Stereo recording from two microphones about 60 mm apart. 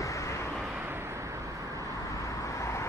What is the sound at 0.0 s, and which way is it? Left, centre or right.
Vehicle, left.